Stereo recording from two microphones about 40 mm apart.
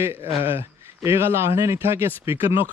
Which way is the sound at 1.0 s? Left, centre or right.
Right.